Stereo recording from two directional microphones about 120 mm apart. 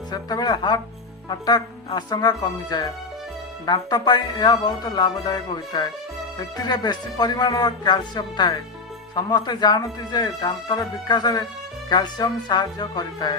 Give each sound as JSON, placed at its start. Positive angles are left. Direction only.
{"t": 0.1, "sound": "speech", "side_deg": 35}